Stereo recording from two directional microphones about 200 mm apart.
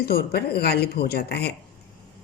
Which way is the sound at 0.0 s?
50° left (ahead or behind).